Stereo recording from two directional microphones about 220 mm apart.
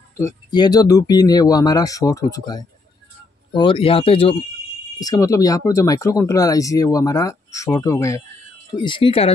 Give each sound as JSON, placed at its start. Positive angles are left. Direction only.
{"t": 0.2, "sound": "speech", "side_deg": 20}